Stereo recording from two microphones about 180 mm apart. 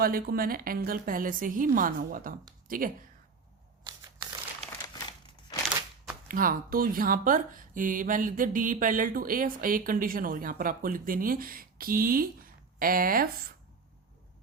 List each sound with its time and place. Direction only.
0.0 s speech: 55° right (ahead or behind)
3.8 s a sound: 25° right (ahead or behind)
6.2 s speech: 50° right (ahead or behind)